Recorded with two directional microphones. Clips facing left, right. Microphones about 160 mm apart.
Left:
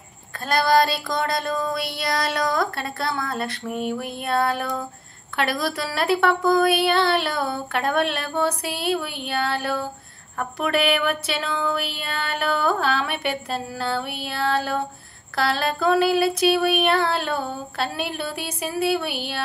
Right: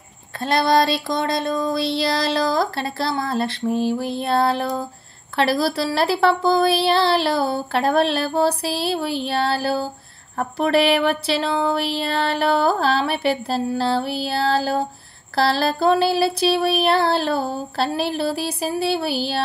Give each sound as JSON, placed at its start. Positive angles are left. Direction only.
{"t": 0.4, "sound": "child singing", "side_deg": -25}
{"t": 5.3, "sound": "a woman's voice", "side_deg": -30}